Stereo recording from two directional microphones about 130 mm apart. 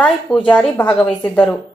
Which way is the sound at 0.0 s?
5° left (ahead or behind).